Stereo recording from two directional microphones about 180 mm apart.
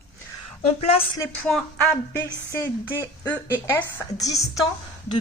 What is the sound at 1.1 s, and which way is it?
Speech, 15° left (ahead or behind).